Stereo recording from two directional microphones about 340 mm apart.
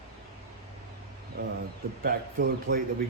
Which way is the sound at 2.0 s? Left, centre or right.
Right.